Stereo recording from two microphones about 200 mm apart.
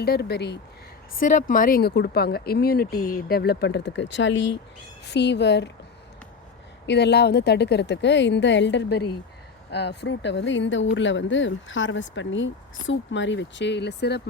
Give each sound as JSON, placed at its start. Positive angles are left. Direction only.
{"t": 0.0, "sound": "speech", "side_deg": 55}
{"t": 1.2, "sound": "speech", "side_deg": 40}
{"t": 6.8, "sound": "speech", "side_deg": 60}